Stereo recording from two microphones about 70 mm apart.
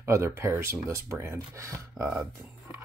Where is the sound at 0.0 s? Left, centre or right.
Right.